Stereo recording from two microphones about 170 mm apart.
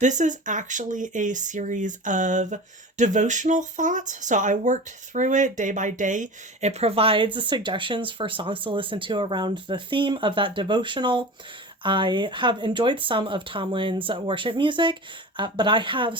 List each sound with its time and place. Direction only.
0.0 s speech: 45° right (ahead or behind); by 16.1 s 30° right (ahead or behind)